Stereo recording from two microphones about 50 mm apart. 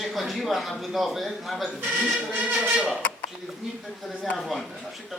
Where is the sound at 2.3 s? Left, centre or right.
Right.